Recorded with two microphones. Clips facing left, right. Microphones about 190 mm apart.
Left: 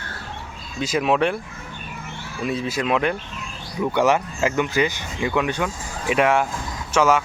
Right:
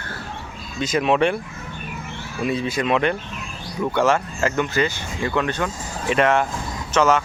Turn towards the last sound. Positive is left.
turn(degrees=10)  # may be behind; listen again after turning